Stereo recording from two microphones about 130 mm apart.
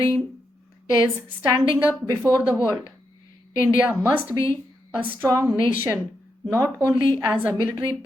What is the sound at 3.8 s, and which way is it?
A woman's voice, 15° right (ahead or behind).